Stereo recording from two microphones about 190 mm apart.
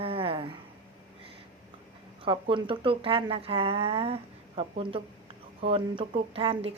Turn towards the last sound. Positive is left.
turn(degrees=-30)  # may be behind; listen again after turning